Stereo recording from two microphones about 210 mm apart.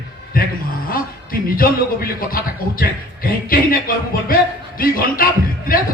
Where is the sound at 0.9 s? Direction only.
45° left (ahead or behind).